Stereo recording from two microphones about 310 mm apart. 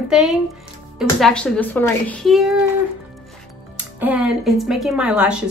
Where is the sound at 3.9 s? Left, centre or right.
Centre.